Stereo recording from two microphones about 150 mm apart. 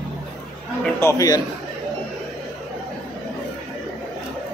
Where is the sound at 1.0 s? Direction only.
25° left (ahead or behind).